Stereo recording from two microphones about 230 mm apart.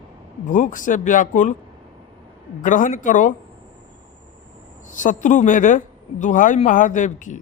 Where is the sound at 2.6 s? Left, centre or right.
Left.